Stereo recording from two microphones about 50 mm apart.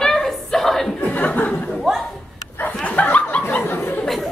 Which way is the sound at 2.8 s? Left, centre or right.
Left.